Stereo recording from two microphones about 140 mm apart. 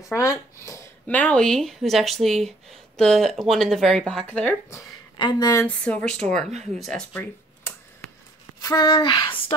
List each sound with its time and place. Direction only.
0.0 s a sound: 20° left (ahead or behind)
1.0 s speech: 10° left (ahead or behind)
4.7 s speech: 30° left (ahead or behind)
5.9 s speech: 5° left (ahead or behind)
8.5 s speech: 30° left (ahead or behind)